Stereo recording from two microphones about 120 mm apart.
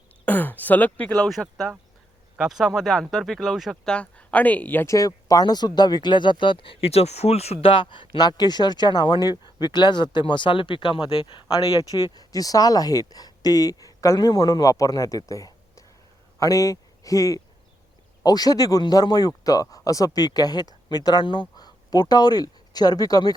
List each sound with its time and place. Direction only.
0.3 s speech: 15° left (ahead or behind)
4.9 s speech: 30° left (ahead or behind)